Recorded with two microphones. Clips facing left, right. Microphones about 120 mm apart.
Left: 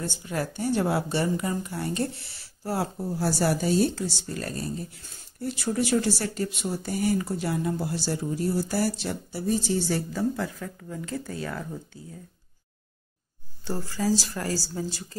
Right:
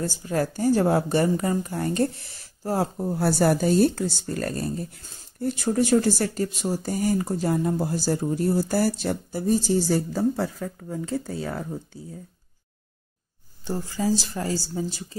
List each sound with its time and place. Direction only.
0.0 s speech: 40° right (ahead or behind)
13.7 s speech: 20° right (ahead or behind)